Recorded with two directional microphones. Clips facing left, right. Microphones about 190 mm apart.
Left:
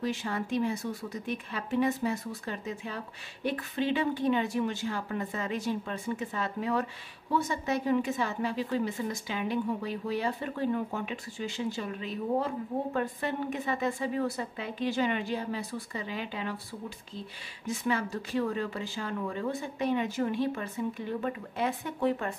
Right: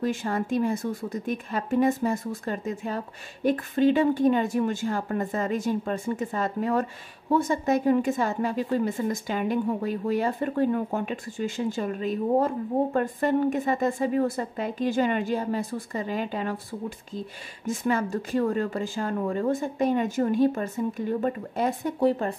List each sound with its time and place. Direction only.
0.0 s a woman's voice: 50° right (ahead or behind)
17.6 s a woman's voice: 45° right (ahead or behind)